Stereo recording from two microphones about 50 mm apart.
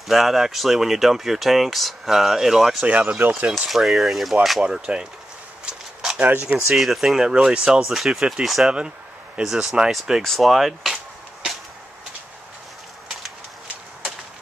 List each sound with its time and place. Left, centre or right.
0.1 s speech: centre
3.2 s speech: right
3.5 s speech: centre
4.6 s speech: centre
6.1 s speech: right
6.7 s speech: centre
10.2 s speech: centre